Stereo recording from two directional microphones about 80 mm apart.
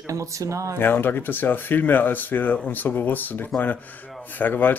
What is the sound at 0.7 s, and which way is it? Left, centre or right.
Speech, left.